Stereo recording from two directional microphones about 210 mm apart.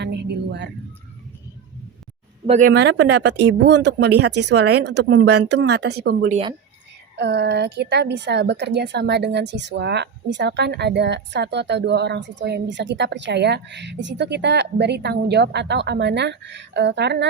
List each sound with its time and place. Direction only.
0.0 s music: 50° right (ahead or behind)
2.5 s speech: 40° right (ahead or behind)
2.7 s a woman's voice: 55° right (ahead or behind)